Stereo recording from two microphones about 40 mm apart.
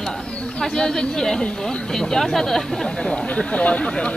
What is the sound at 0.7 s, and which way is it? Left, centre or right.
Speech, centre.